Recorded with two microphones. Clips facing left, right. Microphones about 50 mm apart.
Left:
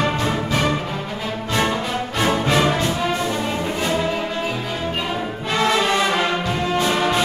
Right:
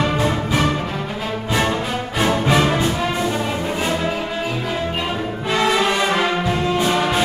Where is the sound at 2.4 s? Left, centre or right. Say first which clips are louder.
Right 2 dB; centre.